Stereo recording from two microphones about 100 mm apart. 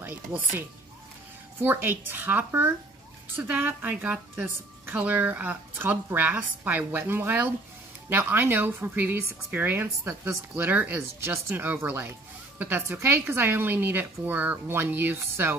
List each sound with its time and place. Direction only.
0.0 s a woman's voice: 20° right (ahead or behind)